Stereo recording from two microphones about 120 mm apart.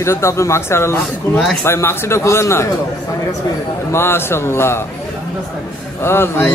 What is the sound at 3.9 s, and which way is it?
A man's voice, 20° left (ahead or behind).